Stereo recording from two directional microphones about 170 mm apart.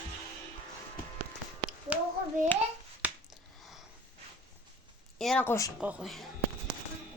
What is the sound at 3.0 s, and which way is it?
Finger snapping, 10° right (ahead or behind).